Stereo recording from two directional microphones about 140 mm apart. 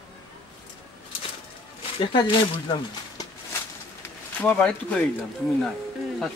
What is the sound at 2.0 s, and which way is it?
Speech, 40° left (ahead or behind).